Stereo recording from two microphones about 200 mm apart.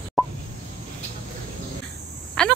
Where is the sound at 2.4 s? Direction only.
5° left (ahead or behind).